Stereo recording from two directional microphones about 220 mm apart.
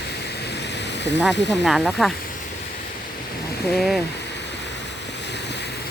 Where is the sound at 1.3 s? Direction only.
50° left (ahead or behind).